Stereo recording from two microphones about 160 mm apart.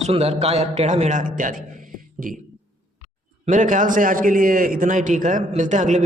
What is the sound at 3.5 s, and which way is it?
A man's voice, 50° right (ahead or behind).